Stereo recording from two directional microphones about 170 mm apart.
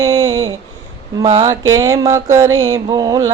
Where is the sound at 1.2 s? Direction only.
20° right (ahead or behind).